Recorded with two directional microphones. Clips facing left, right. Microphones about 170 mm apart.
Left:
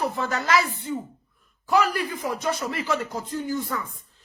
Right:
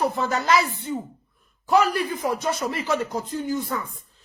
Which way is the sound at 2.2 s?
30° right (ahead or behind).